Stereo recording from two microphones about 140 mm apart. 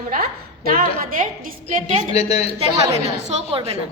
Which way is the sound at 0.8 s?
80° right.